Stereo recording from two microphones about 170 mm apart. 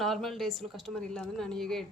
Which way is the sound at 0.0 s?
Centre (ahead or behind).